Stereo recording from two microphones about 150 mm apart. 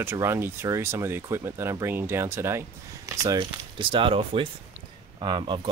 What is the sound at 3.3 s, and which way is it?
Speech, 35° right (ahead or behind).